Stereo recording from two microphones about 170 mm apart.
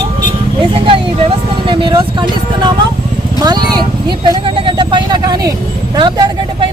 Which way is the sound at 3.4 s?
25° right (ahead or behind).